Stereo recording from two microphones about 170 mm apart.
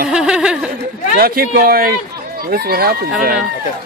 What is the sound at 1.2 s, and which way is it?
Speech, 60° right (ahead or behind).